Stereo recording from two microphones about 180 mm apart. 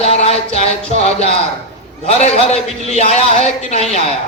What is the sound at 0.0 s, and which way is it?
Music, 35° left (ahead or behind).